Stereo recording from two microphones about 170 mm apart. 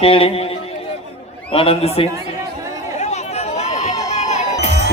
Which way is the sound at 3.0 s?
40° left (ahead or behind).